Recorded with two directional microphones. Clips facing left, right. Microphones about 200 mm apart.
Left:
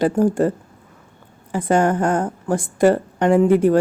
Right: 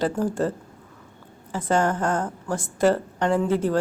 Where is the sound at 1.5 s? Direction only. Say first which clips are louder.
Left 5 dB; 15° left (ahead or behind).